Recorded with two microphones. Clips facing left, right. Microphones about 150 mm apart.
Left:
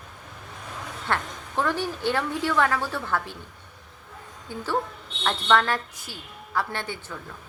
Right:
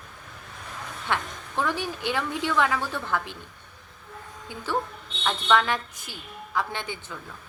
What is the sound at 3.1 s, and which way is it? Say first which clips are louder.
Speech: even; 20° right (ahead or behind).